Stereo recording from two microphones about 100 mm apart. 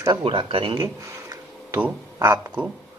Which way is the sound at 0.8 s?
35° right (ahead or behind).